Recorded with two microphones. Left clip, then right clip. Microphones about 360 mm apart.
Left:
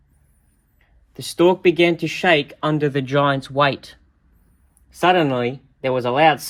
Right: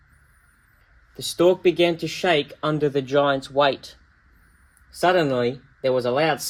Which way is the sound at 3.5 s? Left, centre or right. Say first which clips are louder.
Left 1 dB; left.